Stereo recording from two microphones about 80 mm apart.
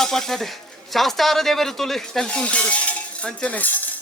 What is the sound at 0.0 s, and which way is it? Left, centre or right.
Speech, centre.